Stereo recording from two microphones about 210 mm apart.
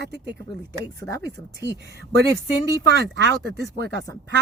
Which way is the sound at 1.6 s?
50° right (ahead or behind).